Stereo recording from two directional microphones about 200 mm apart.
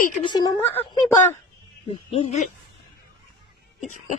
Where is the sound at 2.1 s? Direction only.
30° left (ahead or behind).